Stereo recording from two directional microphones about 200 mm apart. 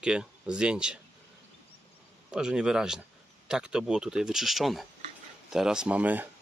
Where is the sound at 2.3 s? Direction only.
5° right (ahead or behind).